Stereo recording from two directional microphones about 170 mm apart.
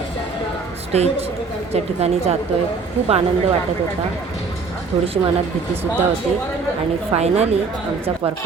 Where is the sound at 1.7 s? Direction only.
40° right (ahead or behind).